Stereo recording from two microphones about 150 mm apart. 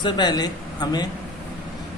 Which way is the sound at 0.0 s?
30° left (ahead or behind).